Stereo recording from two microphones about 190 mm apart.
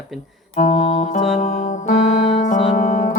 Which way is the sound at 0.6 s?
40° left (ahead or behind).